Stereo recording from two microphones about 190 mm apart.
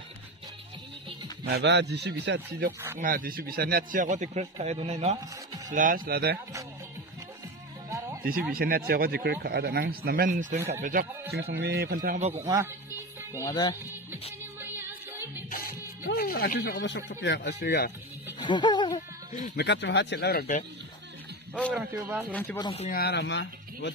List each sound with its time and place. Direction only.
1.4 s speech: 65° right (ahead or behind)
3.0 s speech: 45° right (ahead or behind)
5.7 s speech: 45° right (ahead or behind)
8.5 s speech: 50° right (ahead or behind)
13.3 s speech: 15° left (ahead or behind)
14.6 s music: 10° right (ahead or behind)
15.5 s music: 50° left (ahead or behind)
17.2 s speech: 65° left (ahead or behind)
18.4 s music: 25° left (ahead or behind)
19.5 s speech: 65° left (ahead or behind)
21.7 s a man's voice: 10° right (ahead or behind)
22.3 s speech: 10° left (ahead or behind)
22.6 s speech: 25° left (ahead or behind)
22.8 s speech: 55° left (ahead or behind)